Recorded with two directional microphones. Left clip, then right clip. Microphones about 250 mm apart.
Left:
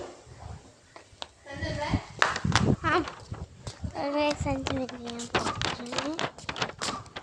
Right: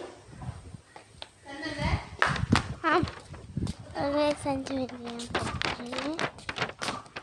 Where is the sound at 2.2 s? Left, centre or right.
Left.